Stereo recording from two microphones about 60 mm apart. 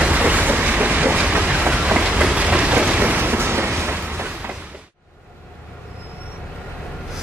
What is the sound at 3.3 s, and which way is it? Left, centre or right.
Vehicle, right.